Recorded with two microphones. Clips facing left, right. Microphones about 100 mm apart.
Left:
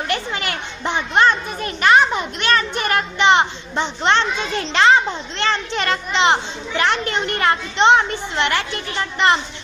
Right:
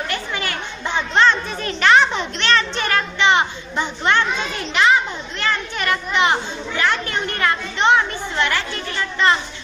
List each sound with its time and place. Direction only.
0.1 s children playing: 20° left (ahead or behind)
2.8 s a child's voice: 20° left (ahead or behind)